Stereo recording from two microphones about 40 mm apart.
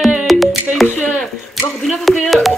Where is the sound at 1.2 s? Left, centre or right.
Centre.